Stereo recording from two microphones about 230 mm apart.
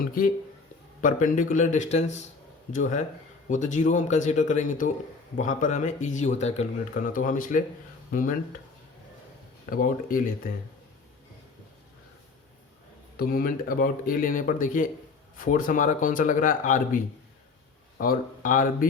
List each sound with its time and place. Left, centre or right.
0.0 s speech: left
9.6 s speech: left
13.1 s speech: left